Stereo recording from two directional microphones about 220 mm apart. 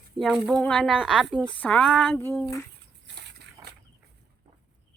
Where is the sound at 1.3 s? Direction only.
10° right (ahead or behind).